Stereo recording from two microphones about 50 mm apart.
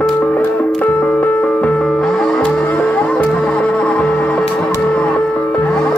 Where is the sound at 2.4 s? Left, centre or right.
Left.